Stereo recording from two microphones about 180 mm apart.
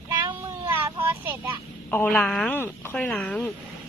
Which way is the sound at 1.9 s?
10° left (ahead or behind).